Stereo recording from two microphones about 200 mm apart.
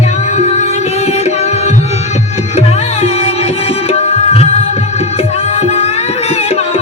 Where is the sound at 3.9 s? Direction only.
30° left (ahead or behind).